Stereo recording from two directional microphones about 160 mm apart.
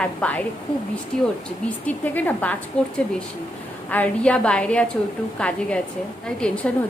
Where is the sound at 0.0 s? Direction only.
10° left (ahead or behind).